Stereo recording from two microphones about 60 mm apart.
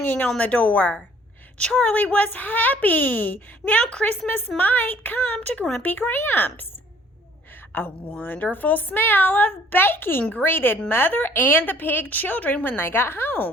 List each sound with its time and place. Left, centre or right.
0.0 s a woman's voice: left
3.8 s speech: centre
4.3 s a woman's voice: left
7.7 s a woman's voice: left